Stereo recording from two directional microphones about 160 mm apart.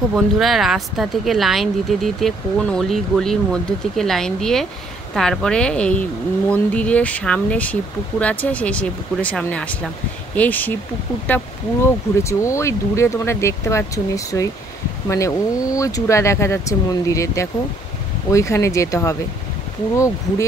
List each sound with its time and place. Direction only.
0.1 s speech: centre (ahead or behind); by 19.1 s 20° left (ahead or behind)